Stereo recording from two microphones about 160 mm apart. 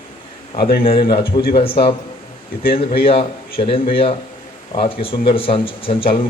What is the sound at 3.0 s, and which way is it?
A man's voice, 35° left (ahead or behind).